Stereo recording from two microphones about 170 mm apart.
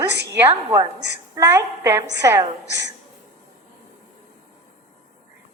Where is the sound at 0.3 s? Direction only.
15° right (ahead or behind).